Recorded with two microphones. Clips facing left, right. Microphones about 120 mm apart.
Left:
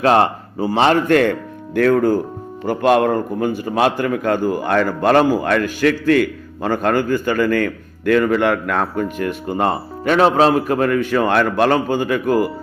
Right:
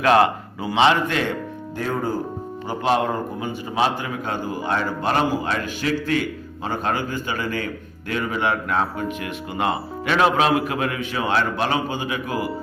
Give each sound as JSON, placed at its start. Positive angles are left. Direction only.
{"t": 0.0, "sound": "a man's voice", "side_deg": 30}
{"t": 0.8, "sound": "speech", "side_deg": 45}
{"t": 2.6, "sound": "a man's voice", "side_deg": 55}
{"t": 9.1, "sound": "a man's voice", "side_deg": 45}